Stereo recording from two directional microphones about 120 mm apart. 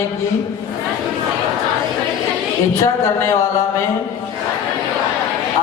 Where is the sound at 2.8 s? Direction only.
25° left (ahead or behind).